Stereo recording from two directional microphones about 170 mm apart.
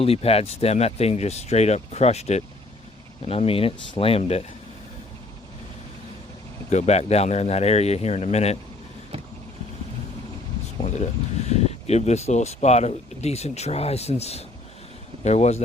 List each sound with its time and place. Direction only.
0.0 s speech: 35° left (ahead or behind)
6.7 s speech: 40° left (ahead or behind)
10.9 s speech: 40° left (ahead or behind)